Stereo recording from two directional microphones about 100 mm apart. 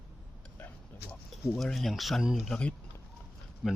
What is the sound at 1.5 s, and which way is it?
Speech, centre (ahead or behind).